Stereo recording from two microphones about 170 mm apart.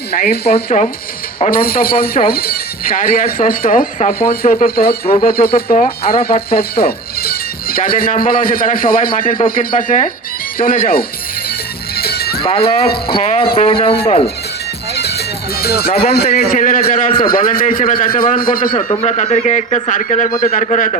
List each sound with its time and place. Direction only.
0.1 s speech: 65° left (ahead or behind)
0.7 s speech: 45° left (ahead or behind)
1.5 s speech: 60° left (ahead or behind)
5.6 s speech: 45° left (ahead or behind)
6.5 s speech: 65° left (ahead or behind)
11.9 s music: 65° left (ahead or behind)
12.4 s speech: 35° left (ahead or behind)
14.9 s music: 70° left (ahead or behind)
16.0 s a man's voice: 65° left (ahead or behind)
16.3 s speech: 50° left (ahead or behind)
18.7 s speech: 30° left (ahead or behind)